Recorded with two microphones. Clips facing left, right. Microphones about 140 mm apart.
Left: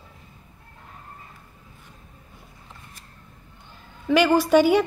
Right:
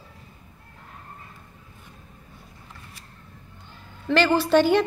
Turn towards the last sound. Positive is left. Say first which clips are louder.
# left 1 dB
turn(degrees=10)  # may be behind; listen again after turning